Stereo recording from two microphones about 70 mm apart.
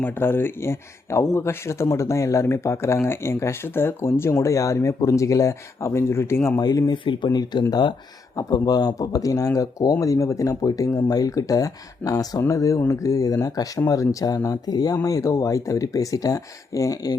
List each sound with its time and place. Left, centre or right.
0.0 s speech: left
6.6 s speech: left
8.4 s speech: left
9.0 s speech: left
15.0 s speech: left